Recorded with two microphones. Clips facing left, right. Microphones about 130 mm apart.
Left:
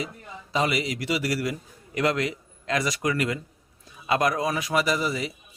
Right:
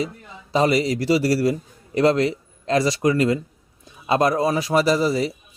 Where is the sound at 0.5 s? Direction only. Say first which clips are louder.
Right 7 dB; 35° right (ahead or behind).